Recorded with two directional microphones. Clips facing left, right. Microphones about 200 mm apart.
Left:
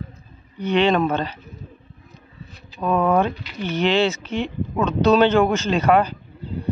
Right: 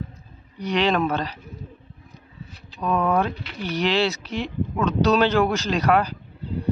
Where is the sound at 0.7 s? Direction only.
Centre (ahead or behind).